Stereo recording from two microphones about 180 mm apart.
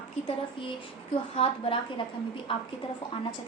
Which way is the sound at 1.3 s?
30° left (ahead or behind).